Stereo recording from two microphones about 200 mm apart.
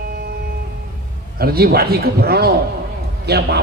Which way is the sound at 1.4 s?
50° right (ahead or behind).